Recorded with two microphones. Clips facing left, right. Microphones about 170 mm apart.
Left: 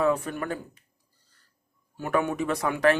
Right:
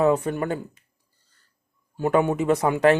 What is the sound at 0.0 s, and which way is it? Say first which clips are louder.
Speech: right 5 dB; 25° right (ahead or behind).